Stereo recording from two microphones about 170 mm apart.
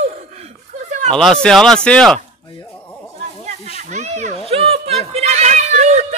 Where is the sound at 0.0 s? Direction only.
45° right (ahead or behind).